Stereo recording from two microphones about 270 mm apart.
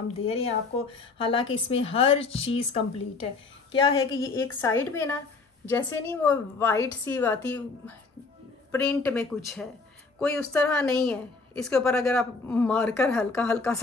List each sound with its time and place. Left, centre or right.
0.1 s a woman's voice: left; by 13.7 s centre